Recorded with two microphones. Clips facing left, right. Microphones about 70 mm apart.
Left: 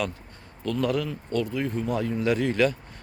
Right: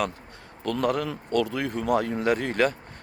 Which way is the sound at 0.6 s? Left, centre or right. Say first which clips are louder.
Right 1 dB; right.